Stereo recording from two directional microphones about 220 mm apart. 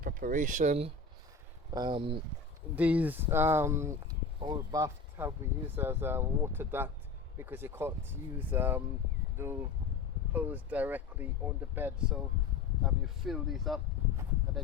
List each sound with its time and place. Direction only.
0.0 s speech: 40° right (ahead or behind); by 2.2 s 25° right (ahead or behind)
2.7 s speech: 5° right (ahead or behind)
10.3 s speech: 10° right (ahead or behind)